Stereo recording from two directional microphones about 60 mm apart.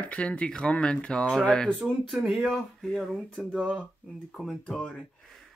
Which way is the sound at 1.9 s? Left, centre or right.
Centre.